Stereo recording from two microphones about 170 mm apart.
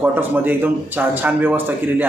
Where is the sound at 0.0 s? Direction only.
10° right (ahead or behind).